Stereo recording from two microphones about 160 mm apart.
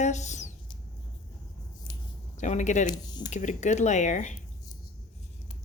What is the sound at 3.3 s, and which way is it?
A woman's voice, 50° left (ahead or behind).